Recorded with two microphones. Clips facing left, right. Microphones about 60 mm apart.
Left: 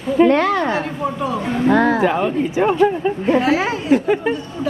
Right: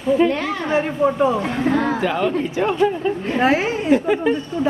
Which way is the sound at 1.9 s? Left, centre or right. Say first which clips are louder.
Left 3 dB; left.